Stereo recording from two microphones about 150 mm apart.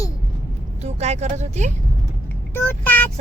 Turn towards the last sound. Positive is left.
turn(degrees=10)  # may be behind; listen again after turning